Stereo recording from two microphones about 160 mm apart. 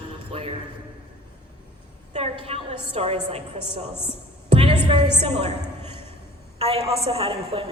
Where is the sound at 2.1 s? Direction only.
40° right (ahead or behind).